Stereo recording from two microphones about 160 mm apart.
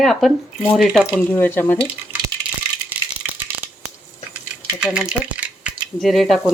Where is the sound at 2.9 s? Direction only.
10° right (ahead or behind).